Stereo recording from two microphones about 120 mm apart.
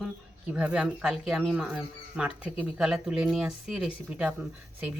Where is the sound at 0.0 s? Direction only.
10° right (ahead or behind).